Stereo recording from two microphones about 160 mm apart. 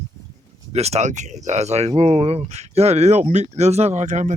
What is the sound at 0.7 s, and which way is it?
A man's voice, 40° right (ahead or behind).